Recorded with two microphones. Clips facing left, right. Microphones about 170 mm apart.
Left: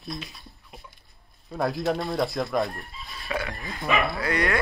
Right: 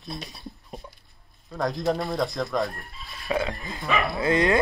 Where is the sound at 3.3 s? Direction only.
20° right (ahead or behind).